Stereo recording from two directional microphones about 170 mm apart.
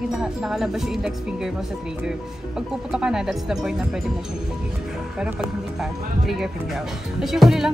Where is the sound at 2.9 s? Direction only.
5° right (ahead or behind).